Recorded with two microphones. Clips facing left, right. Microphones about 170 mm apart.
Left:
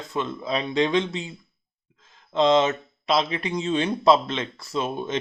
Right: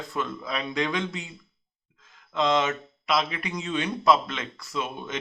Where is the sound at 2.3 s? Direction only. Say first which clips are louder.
Left 5 dB; 30° left (ahead or behind).